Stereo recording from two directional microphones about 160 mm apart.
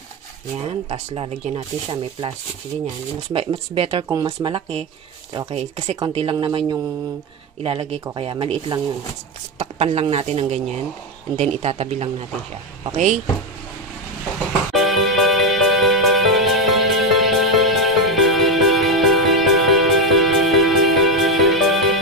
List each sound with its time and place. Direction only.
0.8 s speech: 35° right (ahead or behind)
3.3 s speech: 35° right (ahead or behind)
4.1 s speech: 25° right (ahead or behind)
6.1 s speech: 35° right (ahead or behind)
14.7 s music: centre (ahead or behind)